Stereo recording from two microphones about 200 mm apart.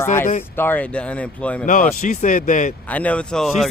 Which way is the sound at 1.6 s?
40° left (ahead or behind).